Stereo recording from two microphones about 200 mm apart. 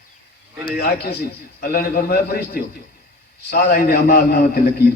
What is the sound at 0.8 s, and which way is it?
A man's voice, 50° left (ahead or behind).